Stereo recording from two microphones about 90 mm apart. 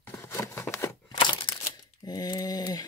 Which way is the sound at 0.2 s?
30° left (ahead or behind).